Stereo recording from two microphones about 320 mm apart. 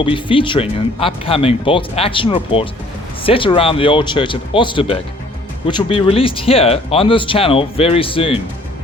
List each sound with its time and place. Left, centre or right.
0.0 s speech: centre